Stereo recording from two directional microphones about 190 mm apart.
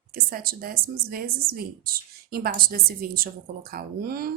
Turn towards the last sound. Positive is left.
turn(degrees=-50)  # may be behind; listen again after turning